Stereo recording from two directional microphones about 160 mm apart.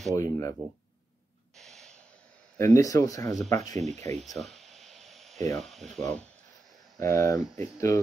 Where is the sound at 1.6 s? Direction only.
5° left (ahead or behind).